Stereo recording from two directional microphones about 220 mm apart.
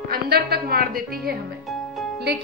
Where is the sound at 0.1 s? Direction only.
45° right (ahead or behind).